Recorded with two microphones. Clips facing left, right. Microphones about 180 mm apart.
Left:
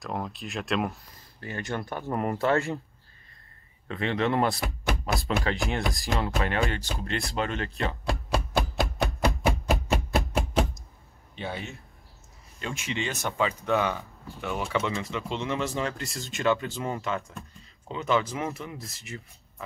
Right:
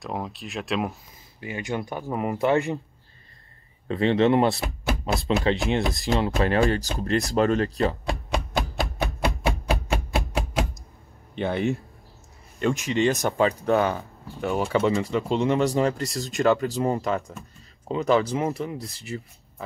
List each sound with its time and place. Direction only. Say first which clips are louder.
0.0 s speech: right 2 dB; centre (ahead or behind)
1.4 s speech: right 3 dB; 15° right (ahead or behind)
2.3 s speech: right 4 dB; 15° right (ahead or behind)
3.8 s speech: right 7 dB; 30° right (ahead or behind)
8.0 s a sound: right 1 dB; centre (ahead or behind)
11.3 s speech: right 11 dB; 55° right (ahead or behind)
12.5 s speech: right 9 dB; 45° right (ahead or behind)